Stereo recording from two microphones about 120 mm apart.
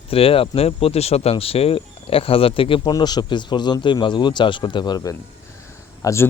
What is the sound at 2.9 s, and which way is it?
Speech, 35° left (ahead or behind).